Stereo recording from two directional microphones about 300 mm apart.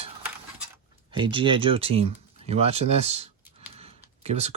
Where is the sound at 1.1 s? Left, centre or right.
Centre.